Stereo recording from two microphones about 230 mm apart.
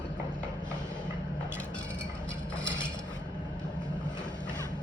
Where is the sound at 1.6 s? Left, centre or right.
Centre.